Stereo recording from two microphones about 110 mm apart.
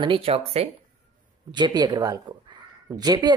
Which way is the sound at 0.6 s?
70° right (ahead or behind).